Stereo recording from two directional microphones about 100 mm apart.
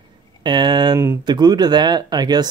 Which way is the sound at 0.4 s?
50° right (ahead or behind).